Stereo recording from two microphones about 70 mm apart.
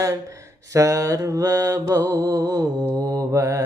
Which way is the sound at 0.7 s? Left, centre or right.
Right.